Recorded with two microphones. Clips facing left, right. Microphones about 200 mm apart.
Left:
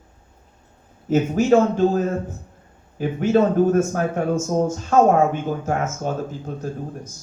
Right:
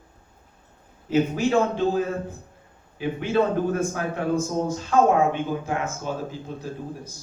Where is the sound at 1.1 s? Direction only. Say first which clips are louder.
Left 5 dB; 45° left (ahead or behind).